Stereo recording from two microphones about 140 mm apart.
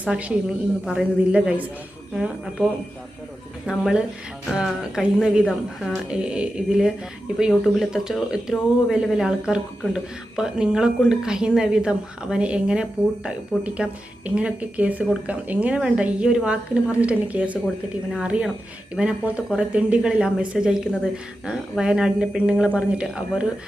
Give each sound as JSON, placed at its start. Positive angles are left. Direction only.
{"t": 0.0, "sound": "speech", "side_deg": -10}